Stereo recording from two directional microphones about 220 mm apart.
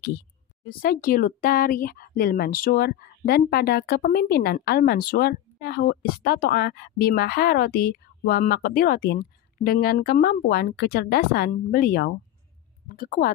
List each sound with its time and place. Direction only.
0.7 s speech: 40° left (ahead or behind)